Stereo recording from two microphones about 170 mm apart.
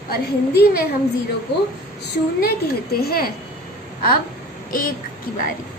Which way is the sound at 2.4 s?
65° left (ahead or behind).